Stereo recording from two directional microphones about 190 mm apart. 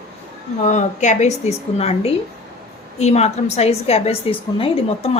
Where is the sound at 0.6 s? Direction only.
40° left (ahead or behind).